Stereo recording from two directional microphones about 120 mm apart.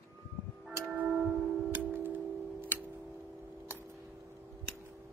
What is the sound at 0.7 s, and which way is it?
Tick-tock, 15° right (ahead or behind).